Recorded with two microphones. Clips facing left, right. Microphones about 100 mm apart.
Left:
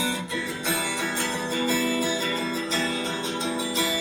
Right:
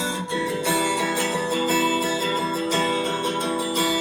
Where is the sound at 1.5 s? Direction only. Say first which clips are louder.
Right 2 dB; 40° right (ahead or behind).